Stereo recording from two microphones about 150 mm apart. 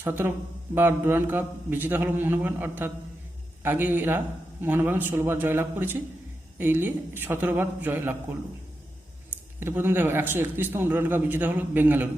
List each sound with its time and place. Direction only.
0.0 s a man's voice: 15° right (ahead or behind)
9.6 s a man's voice: 15° right (ahead or behind)